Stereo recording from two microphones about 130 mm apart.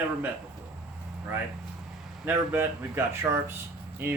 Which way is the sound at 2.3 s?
15° right (ahead or behind).